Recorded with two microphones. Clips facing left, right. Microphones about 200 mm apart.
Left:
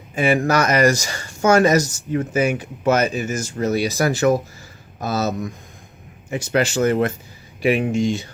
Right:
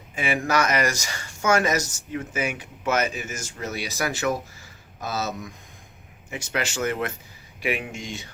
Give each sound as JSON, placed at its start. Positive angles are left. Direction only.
{"t": 0.2, "sound": "speech", "side_deg": 40}